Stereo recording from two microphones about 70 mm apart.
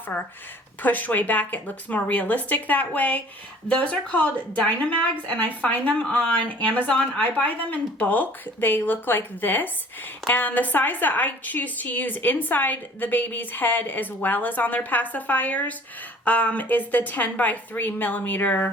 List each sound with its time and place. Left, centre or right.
0.1 s a woman's voice: left